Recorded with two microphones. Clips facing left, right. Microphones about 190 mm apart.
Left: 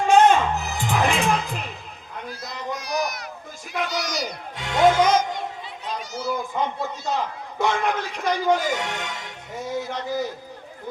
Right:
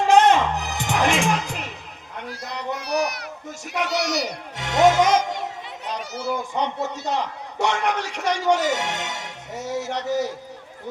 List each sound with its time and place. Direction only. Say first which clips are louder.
0.2 s music: even; 80° right
2.3 s run: right 2 dB; 70° right (ahead or behind)
3.8 s a man's voice: right 3 dB; 70° right (ahead or behind)